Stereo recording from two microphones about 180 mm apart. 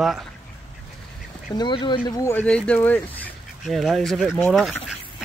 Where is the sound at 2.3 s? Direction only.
10° left (ahead or behind).